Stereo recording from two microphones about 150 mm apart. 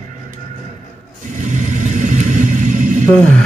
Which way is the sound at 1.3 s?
55° right (ahead or behind).